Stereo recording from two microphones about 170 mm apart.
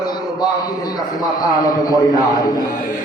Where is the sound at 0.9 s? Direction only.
20° left (ahead or behind).